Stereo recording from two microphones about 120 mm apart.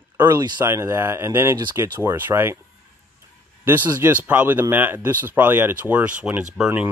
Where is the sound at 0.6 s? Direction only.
20° right (ahead or behind).